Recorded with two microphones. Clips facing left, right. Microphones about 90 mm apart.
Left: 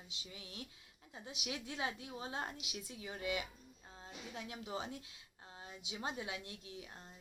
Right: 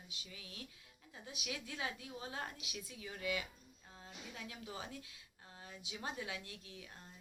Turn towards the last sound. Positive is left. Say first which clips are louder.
# left 3 dB
turn(degrees=25)  # may be behind; listen again after turning